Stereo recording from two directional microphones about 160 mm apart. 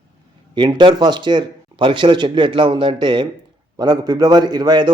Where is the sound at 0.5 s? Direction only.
30° right (ahead or behind).